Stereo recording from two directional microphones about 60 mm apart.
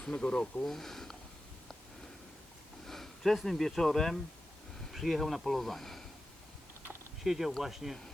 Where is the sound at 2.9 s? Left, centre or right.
Centre.